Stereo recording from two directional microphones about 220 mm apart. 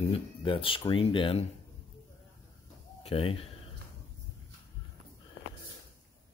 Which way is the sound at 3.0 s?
25° left (ahead or behind).